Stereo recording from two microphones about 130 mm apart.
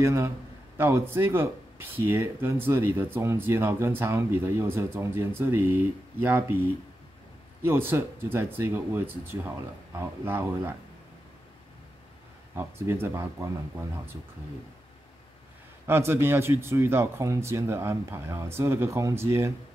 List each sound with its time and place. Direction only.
0.0 s speech: 20° right (ahead or behind)
12.5 s speech: 20° right (ahead or behind)
15.9 s speech: 20° right (ahead or behind)